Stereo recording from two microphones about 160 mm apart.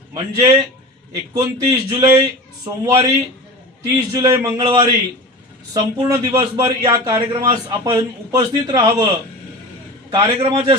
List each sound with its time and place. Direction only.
0.1 s a man's voice: 25° right (ahead or behind)
4.6 s a man's voice: 35° right (ahead or behind)
6.0 s a man's voice: 25° right (ahead or behind)
10.1 s a man's voice: 25° right (ahead or behind)